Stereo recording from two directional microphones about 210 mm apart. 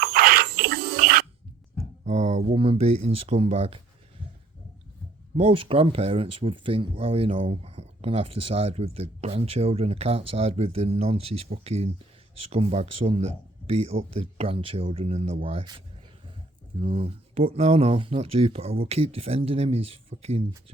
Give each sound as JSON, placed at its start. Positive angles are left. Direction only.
{"t": 0.0, "sound": "a sound", "side_deg": -45}
{"t": 2.0, "sound": "speech", "side_deg": -35}
{"t": 5.4, "sound": "speech", "side_deg": -25}
{"t": 16.8, "sound": "speech", "side_deg": -25}